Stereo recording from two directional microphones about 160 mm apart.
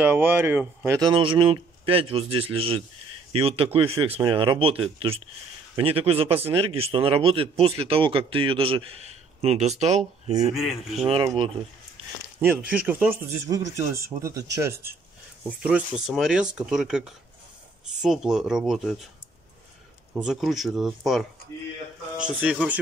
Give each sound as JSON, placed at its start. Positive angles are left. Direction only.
{"t": 0.0, "sound": "a man's voice", "side_deg": -10}
{"t": 10.5, "sound": "speech", "side_deg": 0}
{"t": 11.3, "sound": "a man's voice", "side_deg": -35}
{"t": 12.4, "sound": "speech", "side_deg": -10}
{"t": 20.2, "sound": "speech", "side_deg": 0}